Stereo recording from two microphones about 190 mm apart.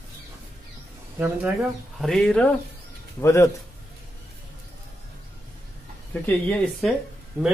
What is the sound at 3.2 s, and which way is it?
Speech, 15° left (ahead or behind).